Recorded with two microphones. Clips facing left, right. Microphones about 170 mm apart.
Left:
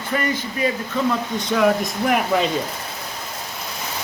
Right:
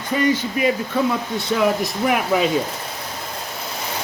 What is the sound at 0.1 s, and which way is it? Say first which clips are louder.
Speech: right 4 dB; 15° right (ahead or behind).